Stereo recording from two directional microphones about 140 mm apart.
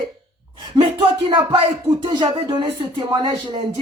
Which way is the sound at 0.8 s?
35° right (ahead or behind).